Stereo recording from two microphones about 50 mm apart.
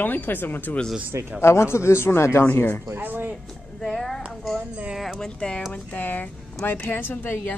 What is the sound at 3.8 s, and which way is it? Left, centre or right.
Speech, centre.